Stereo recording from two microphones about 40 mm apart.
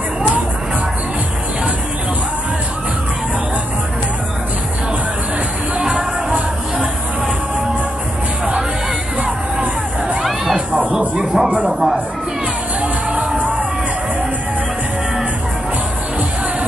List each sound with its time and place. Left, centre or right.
5.9 s music: right
9.2 s music: right; by 12.0 s centre